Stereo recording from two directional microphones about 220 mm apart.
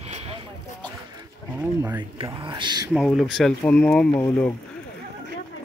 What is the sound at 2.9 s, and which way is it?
Speech, centre (ahead or behind).